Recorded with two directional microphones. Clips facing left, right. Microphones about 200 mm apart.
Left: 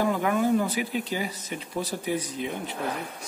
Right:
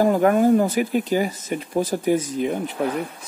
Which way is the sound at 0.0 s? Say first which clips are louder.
Right 8 dB; 45° right (ahead or behind).